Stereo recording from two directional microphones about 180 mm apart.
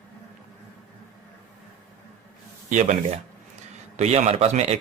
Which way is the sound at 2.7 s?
45° right (ahead or behind).